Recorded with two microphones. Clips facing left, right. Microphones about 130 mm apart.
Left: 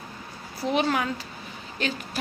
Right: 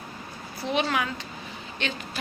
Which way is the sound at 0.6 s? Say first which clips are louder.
Left 2 dB; 40° left (ahead or behind).